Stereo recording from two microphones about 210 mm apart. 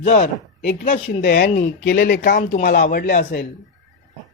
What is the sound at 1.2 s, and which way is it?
Speech, 45° left (ahead or behind).